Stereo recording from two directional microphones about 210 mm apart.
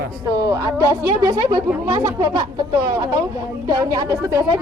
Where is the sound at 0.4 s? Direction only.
15° right (ahead or behind).